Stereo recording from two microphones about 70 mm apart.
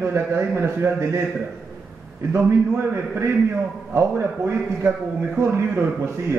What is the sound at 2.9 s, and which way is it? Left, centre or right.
Speech, right.